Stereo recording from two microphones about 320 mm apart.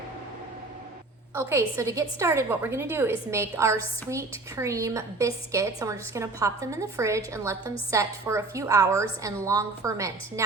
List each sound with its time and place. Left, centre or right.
1.4 s a woman's voice: centre